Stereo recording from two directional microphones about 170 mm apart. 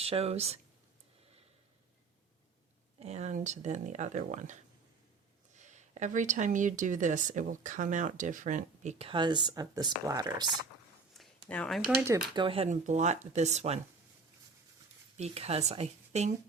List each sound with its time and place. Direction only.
0.0 s speech: 35° right (ahead or behind)
3.0 s speech: 40° right (ahead or behind); by 10.5 s 25° right (ahead or behind)
11.4 s speech: 5° left (ahead or behind)
12.0 s speech: 25° right (ahead or behind); by 13.7 s 40° right (ahead or behind)
15.2 s speech: 35° right (ahead or behind)